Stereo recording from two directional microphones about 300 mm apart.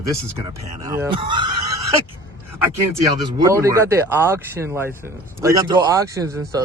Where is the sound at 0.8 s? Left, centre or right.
Centre.